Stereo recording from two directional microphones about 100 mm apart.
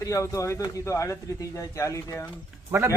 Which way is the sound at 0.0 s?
35° left (ahead or behind).